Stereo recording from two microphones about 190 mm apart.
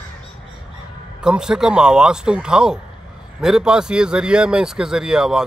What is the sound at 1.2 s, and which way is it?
A man's voice, 5° right (ahead or behind).